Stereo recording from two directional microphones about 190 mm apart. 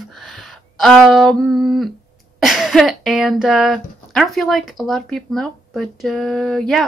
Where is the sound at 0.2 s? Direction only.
Centre (ahead or behind).